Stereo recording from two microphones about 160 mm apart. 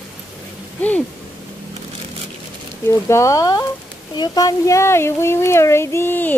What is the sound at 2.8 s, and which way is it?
Speech, 15° left (ahead or behind).